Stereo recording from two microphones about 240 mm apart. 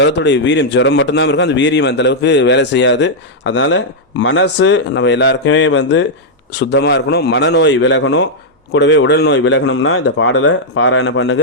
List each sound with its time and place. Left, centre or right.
0.0 s a man's voice: left